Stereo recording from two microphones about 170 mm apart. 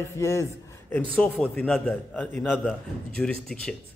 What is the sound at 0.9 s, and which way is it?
A man's voice, 5° left (ahead or behind).